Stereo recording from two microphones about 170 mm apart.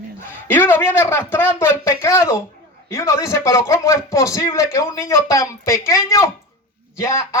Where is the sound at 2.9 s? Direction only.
15° left (ahead or behind).